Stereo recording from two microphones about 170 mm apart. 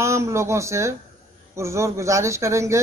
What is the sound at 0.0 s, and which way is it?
Speech, 15° right (ahead or behind).